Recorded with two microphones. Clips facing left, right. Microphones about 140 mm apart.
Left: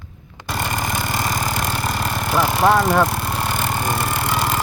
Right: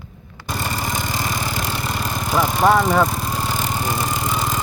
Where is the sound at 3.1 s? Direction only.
65° left (ahead or behind).